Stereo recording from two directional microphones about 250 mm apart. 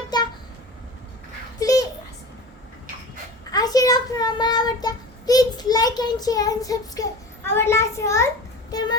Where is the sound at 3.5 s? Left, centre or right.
Centre.